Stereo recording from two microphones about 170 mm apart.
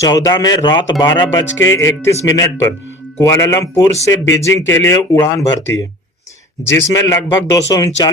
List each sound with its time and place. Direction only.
0.0 s speech: 20° left (ahead or behind)